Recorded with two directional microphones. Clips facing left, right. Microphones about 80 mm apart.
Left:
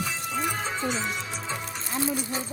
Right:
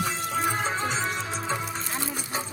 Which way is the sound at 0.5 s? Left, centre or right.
Right.